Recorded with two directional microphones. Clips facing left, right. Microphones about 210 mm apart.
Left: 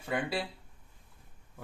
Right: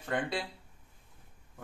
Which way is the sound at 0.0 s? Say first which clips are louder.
Even; 5° left (ahead or behind).